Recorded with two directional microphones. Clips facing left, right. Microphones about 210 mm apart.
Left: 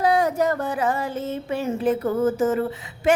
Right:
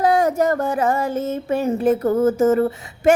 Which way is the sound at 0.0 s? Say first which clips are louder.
Right 3 dB; 45° right (ahead or behind).